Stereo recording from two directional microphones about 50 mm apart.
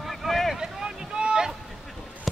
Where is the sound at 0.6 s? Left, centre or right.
Centre.